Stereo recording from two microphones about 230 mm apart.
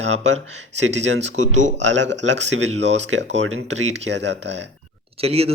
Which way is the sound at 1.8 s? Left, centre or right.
Right.